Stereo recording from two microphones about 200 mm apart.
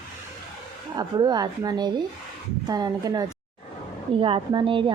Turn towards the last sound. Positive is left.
turn(degrees=-25)  # may be behind; listen again after turning